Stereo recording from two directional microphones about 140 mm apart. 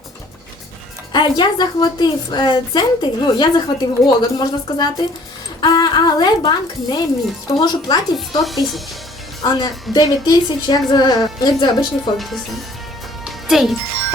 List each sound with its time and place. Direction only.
1.1 s a woman's voice: 30° left (ahead or behind)
8.4 s speech: centre (ahead or behind)
9.4 s a woman's voice: 30° left (ahead or behind)
12.1 s speech: centre (ahead or behind)
13.2 s music: centre (ahead or behind)